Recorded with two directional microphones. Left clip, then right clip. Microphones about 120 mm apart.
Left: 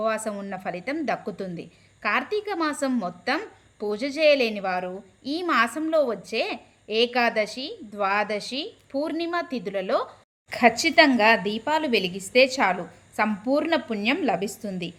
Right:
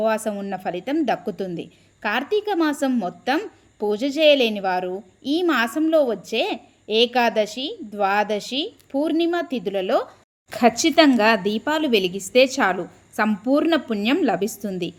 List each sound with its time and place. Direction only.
0.0 s a woman's voice: 30° right (ahead or behind)